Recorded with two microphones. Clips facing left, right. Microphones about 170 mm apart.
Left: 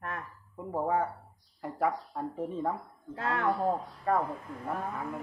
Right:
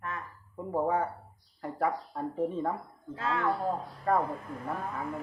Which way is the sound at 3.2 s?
60° left (ahead or behind).